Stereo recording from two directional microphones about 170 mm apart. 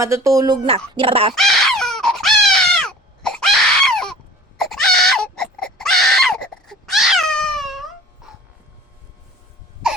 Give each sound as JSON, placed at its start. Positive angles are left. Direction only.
{"t": 0.0, "sound": "speech", "side_deg": -20}
{"t": 1.3, "sound": "baby cry", "side_deg": 0}